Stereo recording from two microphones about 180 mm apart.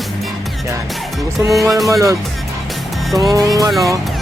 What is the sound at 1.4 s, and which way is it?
Music, centre (ahead or behind).